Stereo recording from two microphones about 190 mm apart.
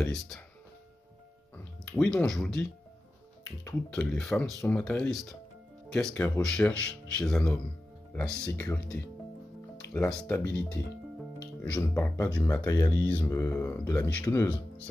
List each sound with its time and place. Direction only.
2.0 s speech: 5° left (ahead or behind)
11.6 s speech: 10° left (ahead or behind)